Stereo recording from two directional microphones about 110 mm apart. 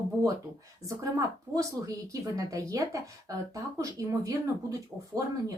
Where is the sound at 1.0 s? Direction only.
30° right (ahead or behind).